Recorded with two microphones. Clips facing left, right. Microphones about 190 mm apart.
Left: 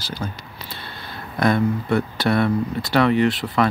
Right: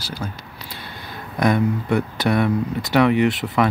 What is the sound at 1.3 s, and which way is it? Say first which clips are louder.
Speech: even; 15° right (ahead or behind).